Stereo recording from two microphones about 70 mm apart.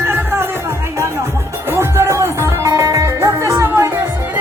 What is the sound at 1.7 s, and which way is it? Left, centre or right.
Music, right.